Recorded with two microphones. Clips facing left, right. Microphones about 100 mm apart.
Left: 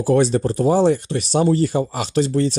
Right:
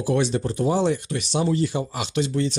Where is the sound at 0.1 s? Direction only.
40° left (ahead or behind).